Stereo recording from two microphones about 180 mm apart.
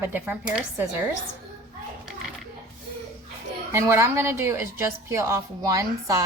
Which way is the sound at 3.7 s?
15° right (ahead or behind).